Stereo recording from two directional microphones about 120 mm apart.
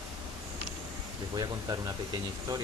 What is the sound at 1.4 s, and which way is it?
Speech, 30° right (ahead or behind).